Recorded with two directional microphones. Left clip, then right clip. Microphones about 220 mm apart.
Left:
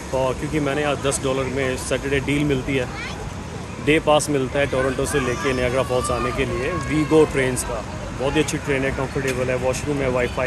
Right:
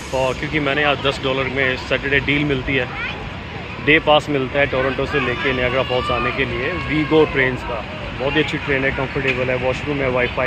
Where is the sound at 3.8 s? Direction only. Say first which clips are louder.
Right 3 dB; 15° left (ahead or behind).